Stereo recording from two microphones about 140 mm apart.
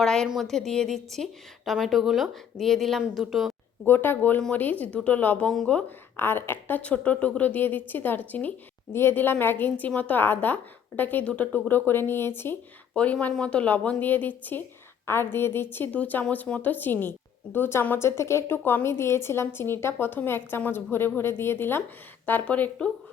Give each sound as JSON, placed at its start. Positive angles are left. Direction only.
{"t": 0.0, "sound": "a woman's voice", "side_deg": 5}
{"t": 3.8, "sound": "speech", "side_deg": 15}